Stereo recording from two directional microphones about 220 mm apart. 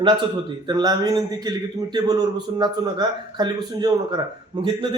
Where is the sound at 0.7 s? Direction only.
20° right (ahead or behind).